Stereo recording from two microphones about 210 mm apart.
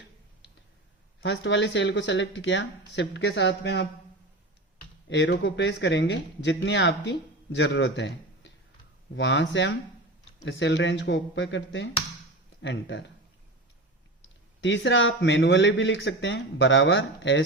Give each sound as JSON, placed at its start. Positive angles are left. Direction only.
{"t": 1.2, "sound": "speech", "side_deg": 60}
{"t": 5.0, "sound": "speech", "side_deg": 60}
{"t": 14.2, "sound": "speech", "side_deg": 60}